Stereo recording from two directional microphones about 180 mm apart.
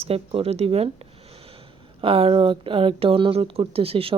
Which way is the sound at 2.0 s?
30° right (ahead or behind).